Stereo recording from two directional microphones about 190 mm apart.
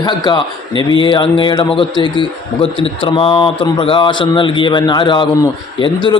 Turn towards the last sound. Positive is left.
turn(degrees=25)  # may be behind; listen again after turning